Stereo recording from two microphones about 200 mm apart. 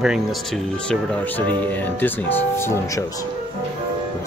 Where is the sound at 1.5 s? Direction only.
10° left (ahead or behind).